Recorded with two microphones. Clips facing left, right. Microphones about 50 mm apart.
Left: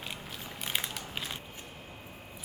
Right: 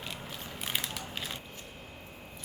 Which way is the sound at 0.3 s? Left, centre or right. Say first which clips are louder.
Even; centre.